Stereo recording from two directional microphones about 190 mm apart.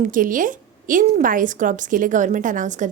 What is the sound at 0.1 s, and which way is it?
A woman's voice, 45° right (ahead or behind).